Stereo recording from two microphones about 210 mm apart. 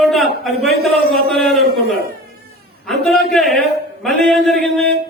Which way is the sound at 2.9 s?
Centre (ahead or behind).